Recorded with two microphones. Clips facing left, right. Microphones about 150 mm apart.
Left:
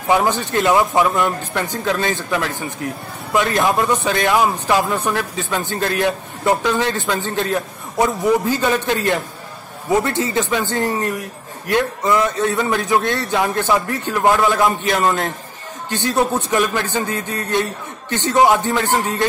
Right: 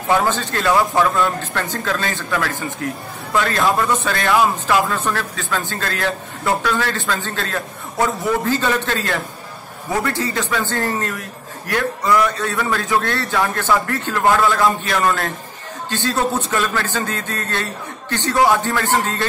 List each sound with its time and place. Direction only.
0.1 s a man's voice: 15° left (ahead or behind)